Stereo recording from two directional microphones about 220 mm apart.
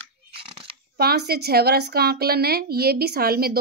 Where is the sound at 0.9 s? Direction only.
45° right (ahead or behind).